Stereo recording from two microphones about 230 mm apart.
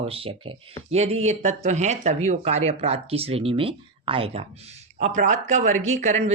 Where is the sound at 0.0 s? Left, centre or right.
Right.